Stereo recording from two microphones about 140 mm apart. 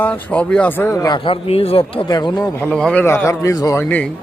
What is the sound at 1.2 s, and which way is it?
Speech, 40° left (ahead or behind).